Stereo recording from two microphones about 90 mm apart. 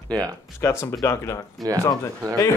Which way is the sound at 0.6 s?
30° left (ahead or behind).